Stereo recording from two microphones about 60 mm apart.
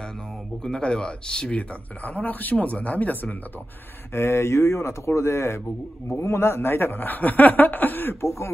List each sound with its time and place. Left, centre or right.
0.7 s a man's voice: centre
1.6 s a man's voice: left
4.1 s a man's voice: left